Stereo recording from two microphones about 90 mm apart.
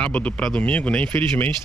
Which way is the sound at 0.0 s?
15° left (ahead or behind).